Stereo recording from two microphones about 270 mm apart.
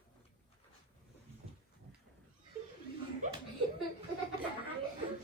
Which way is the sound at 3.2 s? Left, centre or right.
Right.